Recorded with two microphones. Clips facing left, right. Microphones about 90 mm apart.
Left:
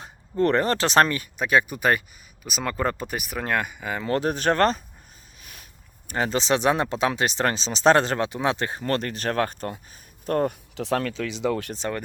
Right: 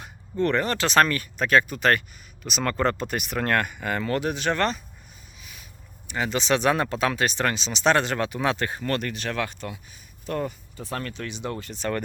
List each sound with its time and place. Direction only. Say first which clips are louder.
0.0 s speech: left 3 dB; 35° left (ahead or behind); by 4.0 s 5° left (ahead or behind)
4.0 s speech: left 4 dB; 35° left (ahead or behind)
5.4 s a sound: even; 50° left (ahead or behind)
6.1 s speech: left 1 dB; 40° left (ahead or behind)
10.8 s speech: left 7 dB; 90° left